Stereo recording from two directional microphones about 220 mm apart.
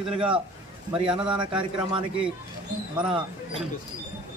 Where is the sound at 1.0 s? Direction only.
5° right (ahead or behind).